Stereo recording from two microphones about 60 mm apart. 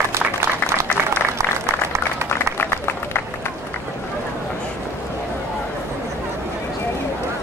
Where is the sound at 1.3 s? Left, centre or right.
Right.